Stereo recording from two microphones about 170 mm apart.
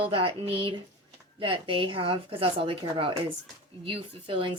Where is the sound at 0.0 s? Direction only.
30° right (ahead or behind).